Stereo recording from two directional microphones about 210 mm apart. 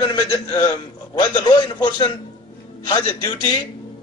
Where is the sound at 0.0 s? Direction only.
20° left (ahead or behind).